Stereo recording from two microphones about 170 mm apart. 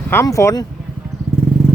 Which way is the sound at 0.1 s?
15° left (ahead or behind).